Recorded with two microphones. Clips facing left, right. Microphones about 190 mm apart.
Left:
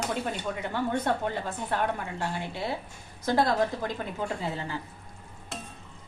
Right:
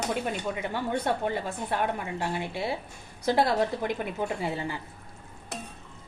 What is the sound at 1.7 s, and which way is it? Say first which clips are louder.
A woman's voice: even; 10° right (ahead or behind).